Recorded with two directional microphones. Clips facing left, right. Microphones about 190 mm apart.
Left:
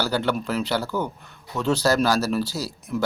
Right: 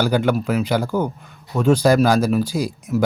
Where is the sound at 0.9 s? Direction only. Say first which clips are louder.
Right 5 dB; 45° right (ahead or behind).